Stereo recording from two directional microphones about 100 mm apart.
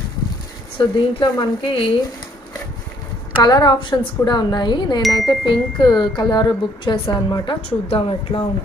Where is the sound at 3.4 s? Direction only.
45° left (ahead or behind).